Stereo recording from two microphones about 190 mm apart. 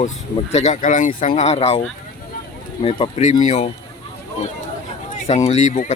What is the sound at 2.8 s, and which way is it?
Speech, 35° left (ahead or behind).